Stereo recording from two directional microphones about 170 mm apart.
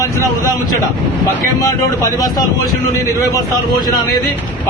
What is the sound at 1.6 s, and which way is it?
Speech, 20° left (ahead or behind).